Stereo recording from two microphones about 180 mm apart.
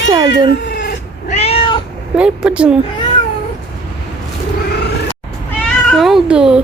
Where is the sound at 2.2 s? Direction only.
5° right (ahead or behind).